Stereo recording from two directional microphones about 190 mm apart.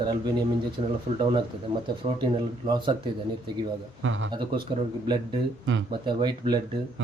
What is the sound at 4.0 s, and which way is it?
Speech, 90° right.